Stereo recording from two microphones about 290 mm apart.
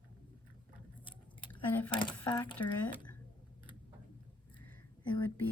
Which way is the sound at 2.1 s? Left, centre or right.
Centre.